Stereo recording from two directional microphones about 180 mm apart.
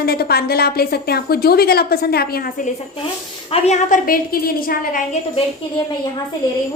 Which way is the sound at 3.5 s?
35° left (ahead or behind).